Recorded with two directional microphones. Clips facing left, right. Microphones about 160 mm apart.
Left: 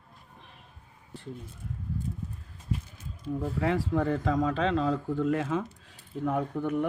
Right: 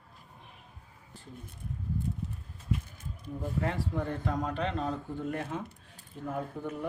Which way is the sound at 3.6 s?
90° left.